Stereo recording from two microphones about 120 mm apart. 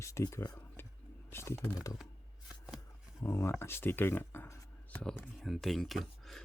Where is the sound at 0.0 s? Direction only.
25° left (ahead or behind).